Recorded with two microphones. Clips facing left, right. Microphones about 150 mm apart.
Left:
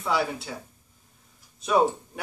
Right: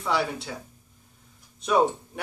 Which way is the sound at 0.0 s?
Centre (ahead or behind).